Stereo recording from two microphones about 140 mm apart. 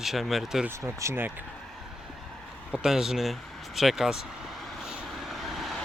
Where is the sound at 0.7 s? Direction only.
20° right (ahead or behind).